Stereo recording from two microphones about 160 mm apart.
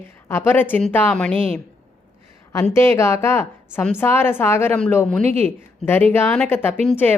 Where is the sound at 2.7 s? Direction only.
15° left (ahead or behind).